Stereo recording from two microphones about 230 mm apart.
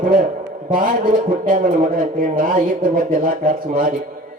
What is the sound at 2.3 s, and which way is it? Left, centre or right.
Speech, right.